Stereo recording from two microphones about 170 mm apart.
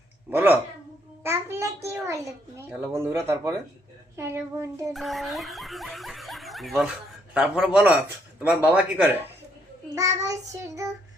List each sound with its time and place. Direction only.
0.3 s speech: 10° right (ahead or behind)
1.2 s a sound: 15° right (ahead or behind)
2.9 s speech: 15° right (ahead or behind)
4.9 s speech: centre (ahead or behind)
9.9 s child singing: 20° right (ahead or behind)